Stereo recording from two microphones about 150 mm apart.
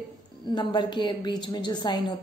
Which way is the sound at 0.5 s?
30° left (ahead or behind).